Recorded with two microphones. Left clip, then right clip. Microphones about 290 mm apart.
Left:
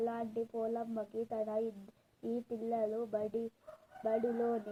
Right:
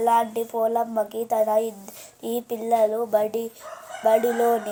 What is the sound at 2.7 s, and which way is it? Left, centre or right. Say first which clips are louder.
Speech: right 16 dB; right.